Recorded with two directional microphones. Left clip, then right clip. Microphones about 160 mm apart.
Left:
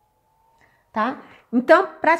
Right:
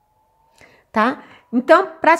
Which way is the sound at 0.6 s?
90° right.